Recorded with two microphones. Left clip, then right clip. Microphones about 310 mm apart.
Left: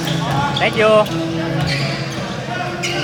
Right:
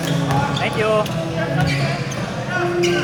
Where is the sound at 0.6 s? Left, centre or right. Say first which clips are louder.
Left 7 dB; left.